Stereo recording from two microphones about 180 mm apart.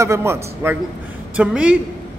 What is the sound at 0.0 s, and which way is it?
A man's voice, 15° right (ahead or behind).